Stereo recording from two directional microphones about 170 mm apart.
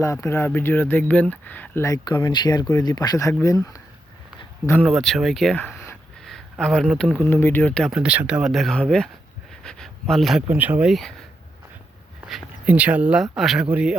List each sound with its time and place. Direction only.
0.0 s speech: 15° left (ahead or behind)
4.8 s speech: centre (ahead or behind)
6.2 s a sound: centre (ahead or behind)
7.0 s speech: 5° left (ahead or behind)
7.9 s speech: 5° right (ahead or behind)
12.2 s speech: 5° right (ahead or behind)